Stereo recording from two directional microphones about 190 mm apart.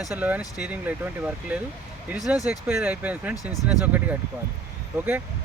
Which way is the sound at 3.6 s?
10° right (ahead or behind).